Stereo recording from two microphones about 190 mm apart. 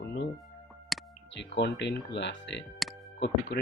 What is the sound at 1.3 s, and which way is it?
Speech, 65° left (ahead or behind).